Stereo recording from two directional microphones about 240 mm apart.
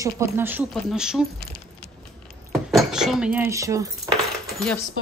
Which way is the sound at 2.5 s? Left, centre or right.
Centre.